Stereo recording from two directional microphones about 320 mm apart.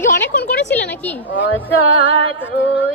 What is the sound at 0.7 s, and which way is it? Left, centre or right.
Speech, centre.